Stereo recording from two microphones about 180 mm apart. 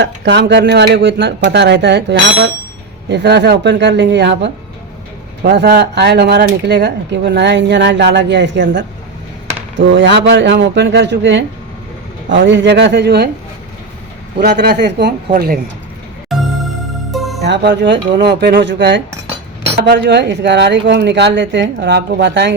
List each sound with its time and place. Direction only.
0.0 s speech: 75° right (ahead or behind)
14.3 s speech: 65° right (ahead or behind)
15.3 s speech: 55° right (ahead or behind)
16.3 s music: centre (ahead or behind)
17.4 s speech: 70° right (ahead or behind)